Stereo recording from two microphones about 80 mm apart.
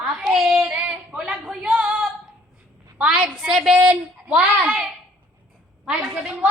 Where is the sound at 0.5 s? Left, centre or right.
Centre.